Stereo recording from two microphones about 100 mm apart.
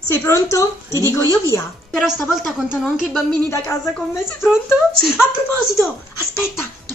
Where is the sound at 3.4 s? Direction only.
25° left (ahead or behind).